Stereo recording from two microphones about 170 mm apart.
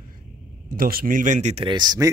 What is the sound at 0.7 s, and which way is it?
Speech, 55° right (ahead or behind).